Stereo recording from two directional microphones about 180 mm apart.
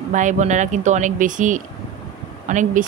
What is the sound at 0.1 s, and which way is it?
Speech, 45° right (ahead or behind).